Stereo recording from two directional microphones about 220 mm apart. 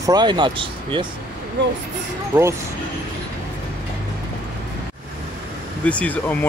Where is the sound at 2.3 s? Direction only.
20° right (ahead or behind).